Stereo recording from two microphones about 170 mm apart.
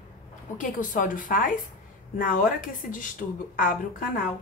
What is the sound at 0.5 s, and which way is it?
A woman's voice, 50° left (ahead or behind).